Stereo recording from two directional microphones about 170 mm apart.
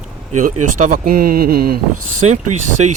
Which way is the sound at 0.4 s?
55° right (ahead or behind).